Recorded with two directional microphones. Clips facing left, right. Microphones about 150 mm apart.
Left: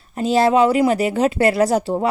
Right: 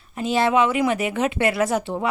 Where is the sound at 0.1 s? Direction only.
35° left (ahead or behind).